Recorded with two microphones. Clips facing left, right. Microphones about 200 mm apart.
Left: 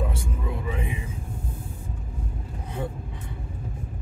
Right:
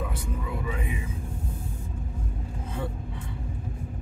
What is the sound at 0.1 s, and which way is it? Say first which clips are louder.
Music: left 1 dB; 25° left (ahead or behind).